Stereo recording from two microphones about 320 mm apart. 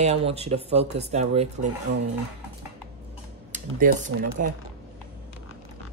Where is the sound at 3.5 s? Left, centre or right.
Right.